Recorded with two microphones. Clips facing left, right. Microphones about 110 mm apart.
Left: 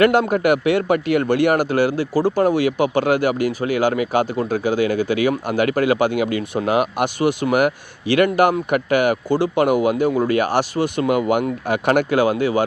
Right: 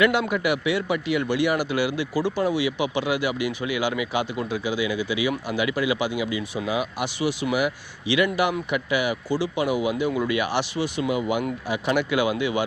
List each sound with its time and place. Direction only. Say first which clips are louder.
0.0 s speech: left 6 dB; 45° left (ahead or behind)
10.1 s speech: left 6 dB; 40° left (ahead or behind)